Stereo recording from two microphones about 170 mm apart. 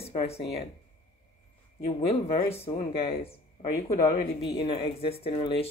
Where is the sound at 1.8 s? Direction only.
35° left (ahead or behind).